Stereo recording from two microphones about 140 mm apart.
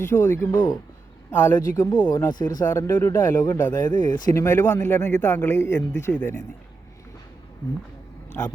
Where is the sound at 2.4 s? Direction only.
30° left (ahead or behind).